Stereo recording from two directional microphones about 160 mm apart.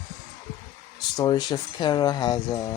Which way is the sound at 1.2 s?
25° left (ahead or behind).